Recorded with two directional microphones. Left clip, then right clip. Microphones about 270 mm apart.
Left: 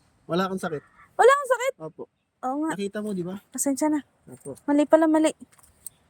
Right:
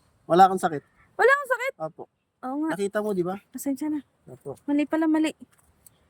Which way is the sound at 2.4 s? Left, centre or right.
Centre.